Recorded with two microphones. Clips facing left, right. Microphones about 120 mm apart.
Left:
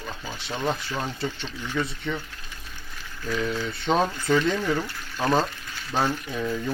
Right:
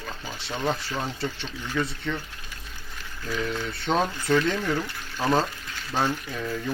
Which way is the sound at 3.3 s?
10° left (ahead or behind).